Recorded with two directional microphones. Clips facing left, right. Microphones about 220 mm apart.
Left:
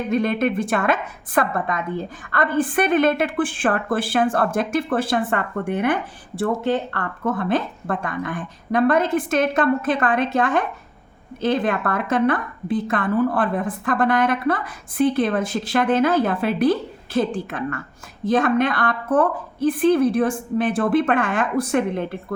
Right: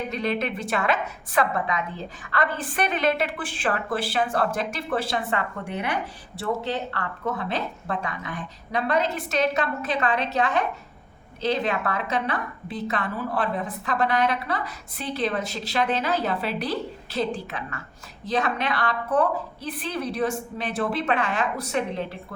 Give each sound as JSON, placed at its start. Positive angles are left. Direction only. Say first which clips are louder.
{"t": 0.1, "sound": "a woman's voice", "louder": "left 11 dB", "side_deg": 50}